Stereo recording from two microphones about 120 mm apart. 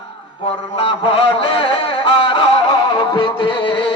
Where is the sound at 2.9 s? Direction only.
35° left (ahead or behind).